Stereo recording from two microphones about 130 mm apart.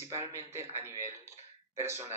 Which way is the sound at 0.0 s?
20° right (ahead or behind).